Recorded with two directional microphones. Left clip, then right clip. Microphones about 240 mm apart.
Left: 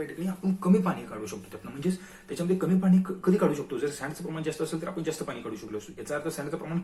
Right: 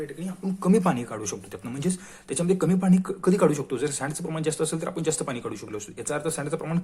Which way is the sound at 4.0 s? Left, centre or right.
Right.